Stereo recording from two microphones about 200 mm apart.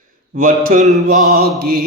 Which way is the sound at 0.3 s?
40° right (ahead or behind).